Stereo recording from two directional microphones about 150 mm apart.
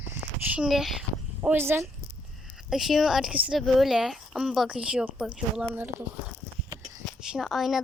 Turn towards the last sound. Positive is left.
turn(degrees=0)  # may be behind; listen again after turning